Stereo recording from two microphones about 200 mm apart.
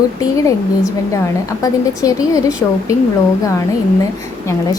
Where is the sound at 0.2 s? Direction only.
15° left (ahead or behind).